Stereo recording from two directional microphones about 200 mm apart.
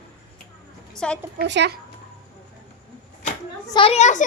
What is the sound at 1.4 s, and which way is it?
Speech, 60° right (ahead or behind).